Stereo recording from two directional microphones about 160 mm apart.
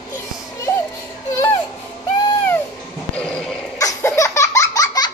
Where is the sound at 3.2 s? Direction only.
5° left (ahead or behind).